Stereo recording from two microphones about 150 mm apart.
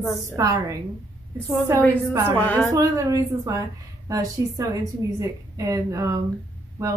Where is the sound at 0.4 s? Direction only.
20° right (ahead or behind).